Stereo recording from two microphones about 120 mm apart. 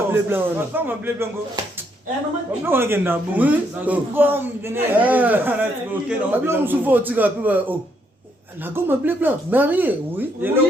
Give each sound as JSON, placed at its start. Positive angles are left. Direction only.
{"t": 0.1, "sound": "speech", "side_deg": -20}
{"t": 2.6, "sound": "speech", "side_deg": -20}